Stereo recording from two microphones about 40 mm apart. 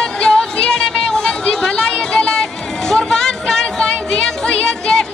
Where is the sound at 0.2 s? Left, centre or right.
Centre.